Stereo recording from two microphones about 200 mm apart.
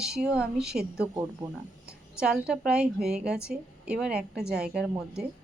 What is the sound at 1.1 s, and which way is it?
Speech, 15° right (ahead or behind).